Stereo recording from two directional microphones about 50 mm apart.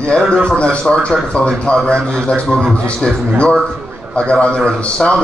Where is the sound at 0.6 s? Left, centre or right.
Left.